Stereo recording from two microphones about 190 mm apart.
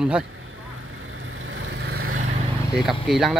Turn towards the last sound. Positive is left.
turn(degrees=0)  # may be behind; listen again after turning